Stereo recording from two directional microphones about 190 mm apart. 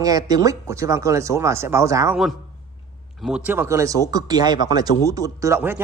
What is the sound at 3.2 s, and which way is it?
A man's voice, 5° right (ahead or behind).